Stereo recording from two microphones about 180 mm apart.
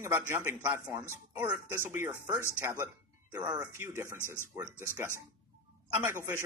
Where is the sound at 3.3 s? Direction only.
20° right (ahead or behind).